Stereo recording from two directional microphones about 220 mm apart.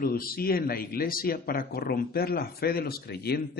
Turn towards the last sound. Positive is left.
turn(degrees=45)  # may be behind; listen again after turning